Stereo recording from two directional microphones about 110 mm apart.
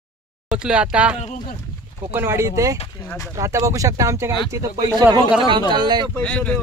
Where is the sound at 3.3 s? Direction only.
30° right (ahead or behind).